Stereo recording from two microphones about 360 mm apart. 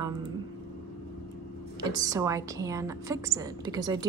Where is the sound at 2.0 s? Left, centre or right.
Centre.